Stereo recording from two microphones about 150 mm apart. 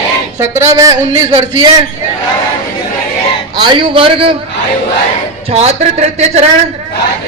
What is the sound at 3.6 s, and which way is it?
Speech, 30° right (ahead or behind).